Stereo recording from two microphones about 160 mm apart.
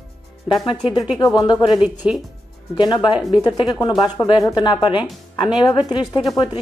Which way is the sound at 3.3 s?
25° left (ahead or behind).